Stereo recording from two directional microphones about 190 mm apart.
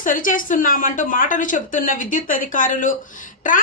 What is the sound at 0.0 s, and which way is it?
A woman's voice, 45° left (ahead or behind).